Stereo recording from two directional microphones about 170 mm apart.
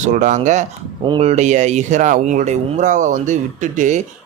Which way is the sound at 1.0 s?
35° right (ahead or behind).